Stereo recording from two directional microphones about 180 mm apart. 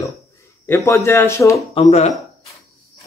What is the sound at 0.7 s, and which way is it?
Speech, 15° left (ahead or behind).